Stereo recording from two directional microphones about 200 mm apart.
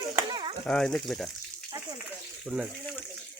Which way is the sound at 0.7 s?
5° left (ahead or behind).